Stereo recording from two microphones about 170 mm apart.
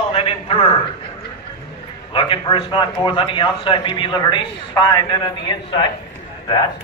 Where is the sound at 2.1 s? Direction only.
30° left (ahead or behind).